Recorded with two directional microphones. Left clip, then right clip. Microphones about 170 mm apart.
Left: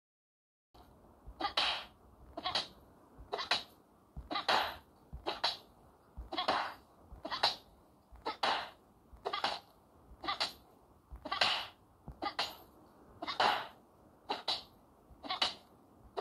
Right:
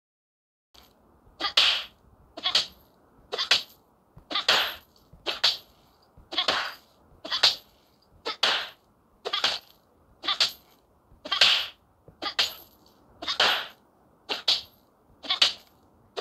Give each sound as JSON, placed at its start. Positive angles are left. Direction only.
{"t": 1.4, "sound": "sneeze", "side_deg": -30}
{"t": 2.3, "sound": "cat", "side_deg": -30}
{"t": 4.3, "sound": "laughter", "side_deg": -30}
{"t": 6.2, "sound": "sneeze", "side_deg": -30}
{"t": 9.2, "sound": "a sound", "side_deg": -30}
{"t": 10.2, "sound": "cat", "side_deg": -30}
{"t": 12.2, "sound": "sneeze", "side_deg": -30}
{"t": 15.1, "sound": "cat", "side_deg": -30}